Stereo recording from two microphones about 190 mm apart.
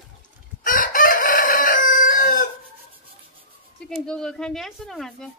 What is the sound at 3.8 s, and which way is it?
A woman's voice, 5° left (ahead or behind).